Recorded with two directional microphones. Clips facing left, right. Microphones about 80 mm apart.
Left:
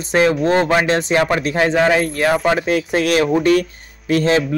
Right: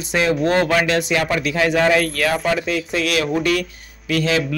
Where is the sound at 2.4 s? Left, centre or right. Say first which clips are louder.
Left 4 dB; left.